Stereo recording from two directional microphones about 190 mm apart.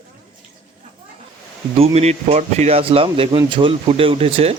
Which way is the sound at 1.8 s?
35° right (ahead or behind).